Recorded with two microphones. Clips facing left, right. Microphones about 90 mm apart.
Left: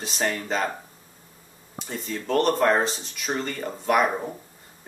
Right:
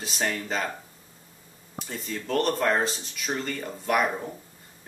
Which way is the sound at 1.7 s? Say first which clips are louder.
Left 2 dB; centre (ahead or behind).